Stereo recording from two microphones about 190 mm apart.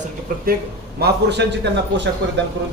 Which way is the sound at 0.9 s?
60° right (ahead or behind).